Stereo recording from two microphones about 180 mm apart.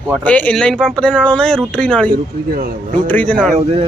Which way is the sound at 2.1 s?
50° right (ahead or behind).